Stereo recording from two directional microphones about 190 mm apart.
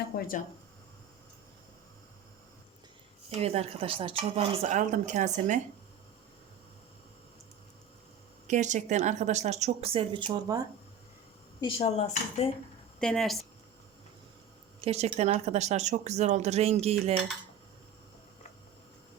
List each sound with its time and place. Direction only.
0.0 s speech: 50° left (ahead or behind)
3.2 s speech: 35° right (ahead or behind)
8.4 s speech: 40° right (ahead or behind); by 10.6 s 20° right (ahead or behind)
11.6 s speech: 30° left (ahead or behind)
13.0 s speech: 5° left (ahead or behind)
14.8 s speech: 35° right (ahead or behind)